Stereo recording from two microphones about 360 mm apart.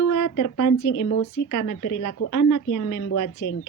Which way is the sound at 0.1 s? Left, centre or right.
Left.